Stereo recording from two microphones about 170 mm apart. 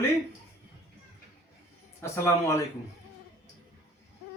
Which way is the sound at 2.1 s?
15° left (ahead or behind).